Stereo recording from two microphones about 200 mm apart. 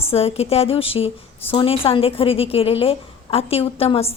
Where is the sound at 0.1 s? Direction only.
30° left (ahead or behind).